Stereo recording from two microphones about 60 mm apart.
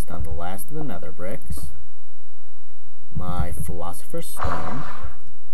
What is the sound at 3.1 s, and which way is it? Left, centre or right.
Speech, centre.